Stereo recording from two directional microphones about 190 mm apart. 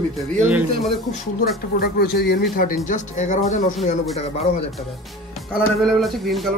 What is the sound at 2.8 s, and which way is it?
Speech, 40° left (ahead or behind).